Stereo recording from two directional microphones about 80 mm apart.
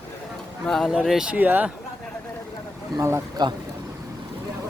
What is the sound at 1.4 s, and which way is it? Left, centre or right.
Speech, right.